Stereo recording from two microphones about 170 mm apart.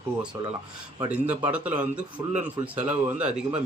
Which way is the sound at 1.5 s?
10° right (ahead or behind).